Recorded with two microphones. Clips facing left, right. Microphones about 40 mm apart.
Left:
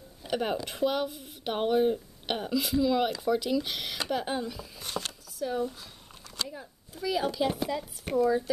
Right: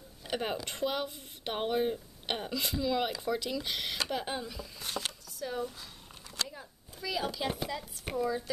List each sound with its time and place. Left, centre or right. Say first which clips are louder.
0.2 s speech: left 4 dB; centre